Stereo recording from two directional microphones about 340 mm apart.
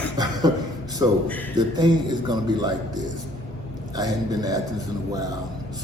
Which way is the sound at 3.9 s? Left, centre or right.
Centre.